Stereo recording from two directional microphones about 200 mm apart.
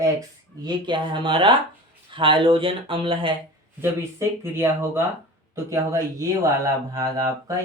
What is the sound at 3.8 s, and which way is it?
Speech, 10° right (ahead or behind).